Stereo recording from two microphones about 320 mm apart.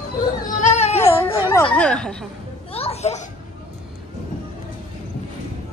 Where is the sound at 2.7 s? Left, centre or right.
Centre.